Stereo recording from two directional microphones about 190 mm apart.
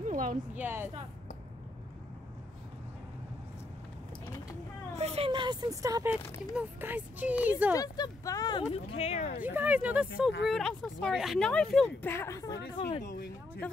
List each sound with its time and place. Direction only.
0.1 s a sound: 45° right (ahead or behind)
0.6 s speech: 10° right (ahead or behind)
4.9 s a sound: 35° right (ahead or behind)
6.5 s speech: 10° right (ahead or behind)
7.7 s speech: 20° left (ahead or behind)
8.7 s speech: 30° left (ahead or behind)
9.4 s speech: 10° right (ahead or behind); by 12.9 s 25° left (ahead or behind)